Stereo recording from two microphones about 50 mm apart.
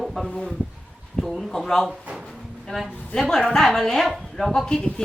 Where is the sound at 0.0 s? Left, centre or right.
Centre.